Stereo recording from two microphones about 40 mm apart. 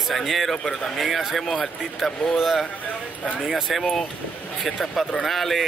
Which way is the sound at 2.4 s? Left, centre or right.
Centre.